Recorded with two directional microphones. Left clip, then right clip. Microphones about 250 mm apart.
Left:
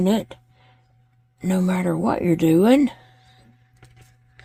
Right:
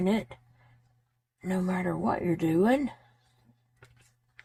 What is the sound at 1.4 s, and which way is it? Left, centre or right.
Speech, left.